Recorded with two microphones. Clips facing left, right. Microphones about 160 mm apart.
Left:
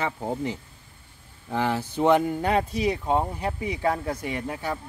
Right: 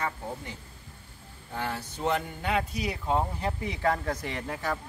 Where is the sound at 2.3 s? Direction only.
40° left (ahead or behind).